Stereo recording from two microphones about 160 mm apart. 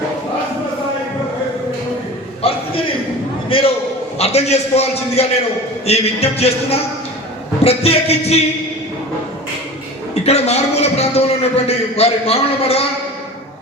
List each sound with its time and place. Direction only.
2.4 s a sound: 35° left (ahead or behind)
3.5 s a man's voice: 35° left (ahead or behind)
10.2 s a man's voice: 40° left (ahead or behind)